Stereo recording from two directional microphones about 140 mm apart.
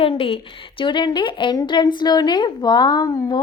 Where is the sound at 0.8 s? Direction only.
35° left (ahead or behind).